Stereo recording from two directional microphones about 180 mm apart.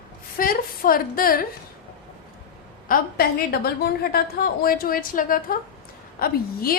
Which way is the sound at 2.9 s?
60° left (ahead or behind).